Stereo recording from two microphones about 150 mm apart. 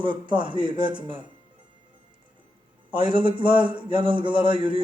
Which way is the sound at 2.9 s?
35° right (ahead or behind).